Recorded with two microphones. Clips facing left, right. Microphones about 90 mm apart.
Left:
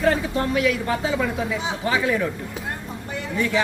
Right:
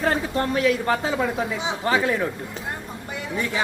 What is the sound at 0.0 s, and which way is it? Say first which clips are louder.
Speech: left 2 dB; 35° right (ahead or behind).